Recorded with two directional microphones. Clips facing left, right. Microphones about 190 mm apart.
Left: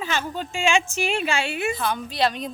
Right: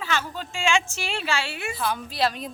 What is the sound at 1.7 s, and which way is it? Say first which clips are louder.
Speech: left 2 dB; 5° right (ahead or behind).